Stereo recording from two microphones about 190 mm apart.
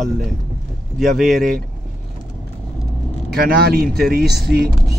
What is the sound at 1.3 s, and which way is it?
Speech, 50° right (ahead or behind).